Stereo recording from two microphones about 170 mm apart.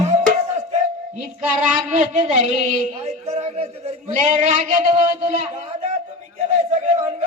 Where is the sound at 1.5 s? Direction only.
50° right (ahead or behind).